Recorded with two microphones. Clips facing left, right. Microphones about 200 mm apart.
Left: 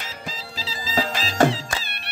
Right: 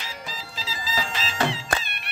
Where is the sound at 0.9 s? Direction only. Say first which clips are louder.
Left 7 dB; 40° left (ahead or behind).